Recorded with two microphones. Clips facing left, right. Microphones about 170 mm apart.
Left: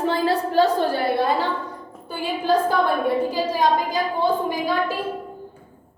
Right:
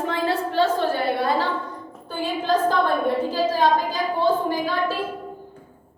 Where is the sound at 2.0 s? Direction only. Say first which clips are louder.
Left 2 dB; 10° left (ahead or behind).